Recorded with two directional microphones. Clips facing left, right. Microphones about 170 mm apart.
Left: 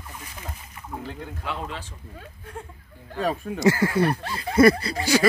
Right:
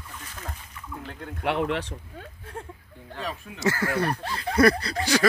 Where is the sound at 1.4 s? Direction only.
70° right (ahead or behind).